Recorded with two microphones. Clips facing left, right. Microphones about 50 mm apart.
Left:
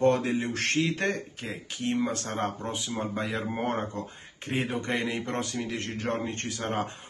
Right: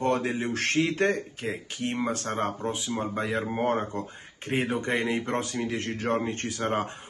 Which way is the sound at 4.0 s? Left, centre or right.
Right.